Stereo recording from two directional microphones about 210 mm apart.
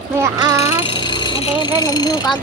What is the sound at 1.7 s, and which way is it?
Speech, 20° left (ahead or behind).